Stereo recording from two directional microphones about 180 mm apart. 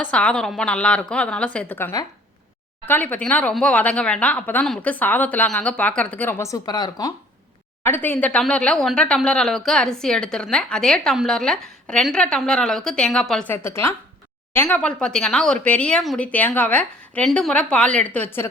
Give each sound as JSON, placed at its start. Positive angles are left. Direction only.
{"t": 0.0, "sound": "a woman's voice", "side_deg": 5}
{"t": 7.9, "sound": "speech", "side_deg": 10}
{"t": 13.6, "sound": "a woman's voice", "side_deg": 15}